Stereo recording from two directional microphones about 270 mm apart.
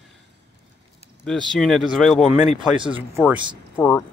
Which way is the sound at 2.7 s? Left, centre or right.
Centre.